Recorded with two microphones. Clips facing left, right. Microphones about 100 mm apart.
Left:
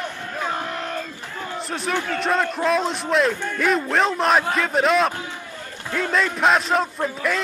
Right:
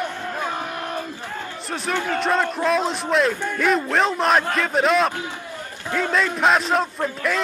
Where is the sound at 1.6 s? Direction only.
Centre (ahead or behind).